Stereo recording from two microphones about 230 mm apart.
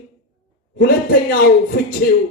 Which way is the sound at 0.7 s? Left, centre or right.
Left.